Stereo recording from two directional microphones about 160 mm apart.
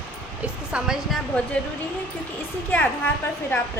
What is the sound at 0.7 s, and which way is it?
Speech, 5° right (ahead or behind).